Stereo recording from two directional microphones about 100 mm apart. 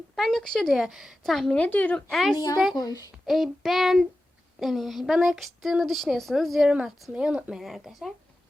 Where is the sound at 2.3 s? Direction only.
40° left (ahead or behind).